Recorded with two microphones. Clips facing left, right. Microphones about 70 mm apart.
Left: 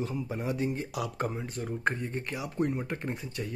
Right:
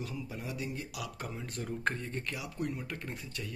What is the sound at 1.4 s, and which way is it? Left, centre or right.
Speech, centre.